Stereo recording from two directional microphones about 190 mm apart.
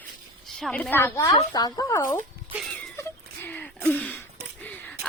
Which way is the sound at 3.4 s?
10° left (ahead or behind).